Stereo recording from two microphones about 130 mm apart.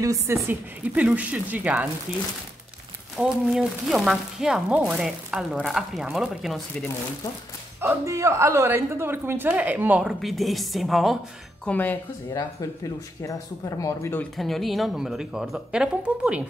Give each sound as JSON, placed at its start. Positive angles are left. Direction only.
{"t": 0.0, "sound": "a woman's voice", "side_deg": -25}
{"t": 0.5, "sound": "a woman's voice", "side_deg": -10}
{"t": 3.2, "sound": "speech", "side_deg": -5}
{"t": 7.8, "sound": "a woman's voice", "side_deg": -20}
{"t": 11.6, "sound": "speech", "side_deg": 10}
{"t": 12.3, "sound": "speech", "side_deg": 25}
{"t": 14.3, "sound": "speech", "side_deg": 0}